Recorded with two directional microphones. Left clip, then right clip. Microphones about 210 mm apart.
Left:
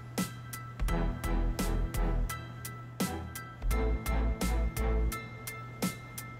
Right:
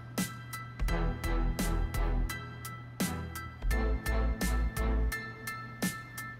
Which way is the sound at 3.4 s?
Centre (ahead or behind).